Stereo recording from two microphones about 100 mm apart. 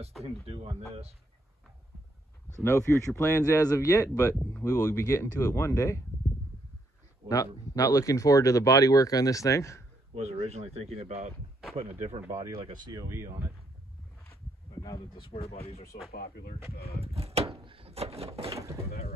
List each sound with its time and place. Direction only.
0.2 s speech: 90° right
2.6 s speech: 30° left (ahead or behind)
7.2 s speech: 35° left (ahead or behind)
10.1 s speech: 90° right
12.3 s speech: 35° right (ahead or behind)
14.8 s speech: 45° left (ahead or behind)
15.3 s speech: 90° left
17.0 s speech: 80° right
18.5 s speech: 30° right (ahead or behind)